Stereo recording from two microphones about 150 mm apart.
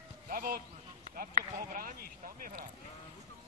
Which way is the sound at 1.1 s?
70° right (ahead or behind).